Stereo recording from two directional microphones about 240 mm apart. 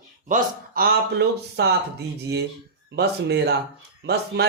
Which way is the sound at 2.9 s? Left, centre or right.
Right.